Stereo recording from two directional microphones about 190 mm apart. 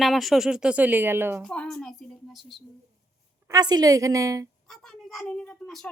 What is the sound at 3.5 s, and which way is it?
A woman's voice, 20° right (ahead or behind).